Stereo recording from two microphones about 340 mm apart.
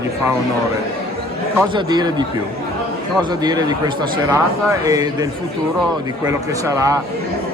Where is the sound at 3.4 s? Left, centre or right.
Centre.